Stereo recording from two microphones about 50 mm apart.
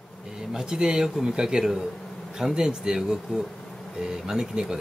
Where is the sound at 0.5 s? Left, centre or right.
Centre.